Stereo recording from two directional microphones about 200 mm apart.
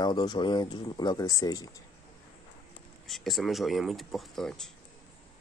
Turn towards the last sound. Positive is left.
turn(degrees=0)  # may be behind; listen again after turning